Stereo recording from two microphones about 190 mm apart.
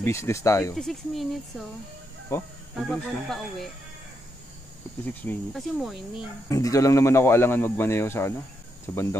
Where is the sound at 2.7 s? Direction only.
Centre (ahead or behind).